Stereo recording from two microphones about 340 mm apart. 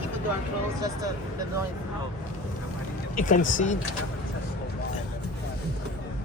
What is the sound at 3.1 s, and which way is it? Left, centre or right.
Speech, left.